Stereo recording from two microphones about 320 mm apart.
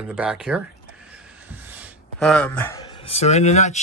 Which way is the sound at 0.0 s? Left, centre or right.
Centre.